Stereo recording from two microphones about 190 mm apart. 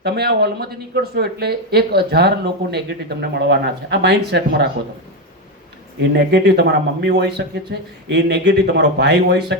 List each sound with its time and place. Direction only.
0.0 s speech: 55° right (ahead or behind)
6.0 s speech: 60° right (ahead or behind)